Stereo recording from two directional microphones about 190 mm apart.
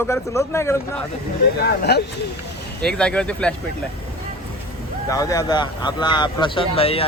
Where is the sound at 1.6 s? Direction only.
60° left (ahead or behind).